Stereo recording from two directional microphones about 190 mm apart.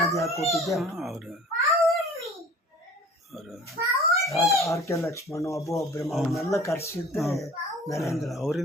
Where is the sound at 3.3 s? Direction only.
Centre (ahead or behind).